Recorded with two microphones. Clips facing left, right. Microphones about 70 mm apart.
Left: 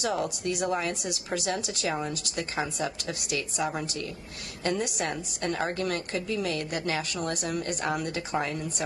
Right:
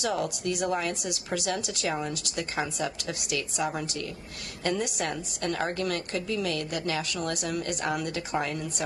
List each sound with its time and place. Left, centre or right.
0.0 s a woman's voice: left
2.3 s a woman's voice: left